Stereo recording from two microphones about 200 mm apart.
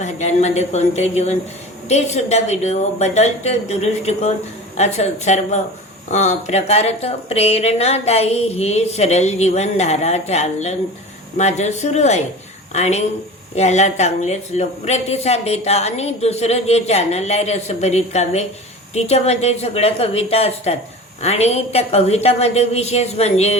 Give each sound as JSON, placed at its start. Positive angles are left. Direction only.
{"t": 0.0, "sound": "speech", "side_deg": 35}